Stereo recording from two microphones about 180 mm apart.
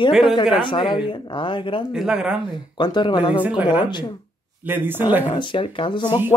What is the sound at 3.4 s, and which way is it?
Speech, 10° right (ahead or behind).